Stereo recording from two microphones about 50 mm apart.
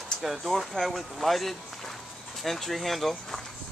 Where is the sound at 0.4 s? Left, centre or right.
Centre.